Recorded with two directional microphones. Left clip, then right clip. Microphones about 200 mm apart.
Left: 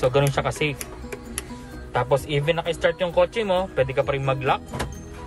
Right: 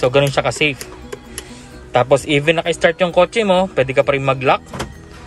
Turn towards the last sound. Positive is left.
turn(degrees=-20)  # may be behind; listen again after turning